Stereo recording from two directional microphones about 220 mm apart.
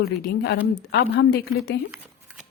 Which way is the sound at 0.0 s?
45° left (ahead or behind).